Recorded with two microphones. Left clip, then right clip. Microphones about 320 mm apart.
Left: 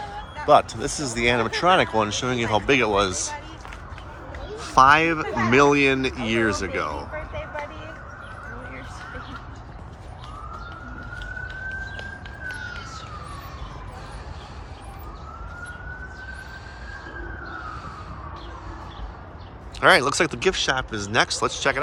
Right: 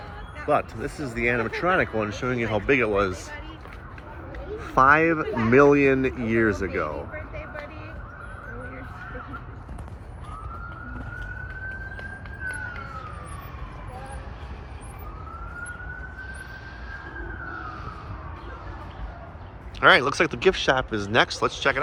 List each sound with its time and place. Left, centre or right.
0.4 s speech: centre
4.6 s speech: centre
19.8 s speech: centre